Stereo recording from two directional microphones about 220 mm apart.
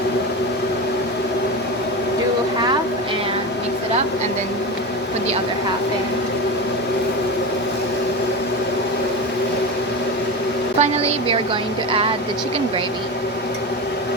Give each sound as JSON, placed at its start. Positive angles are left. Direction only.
{"t": 10.8, "sound": "a woman's voice", "side_deg": -25}